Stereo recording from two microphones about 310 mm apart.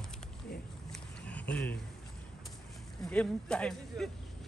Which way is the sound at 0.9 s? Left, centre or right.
Centre.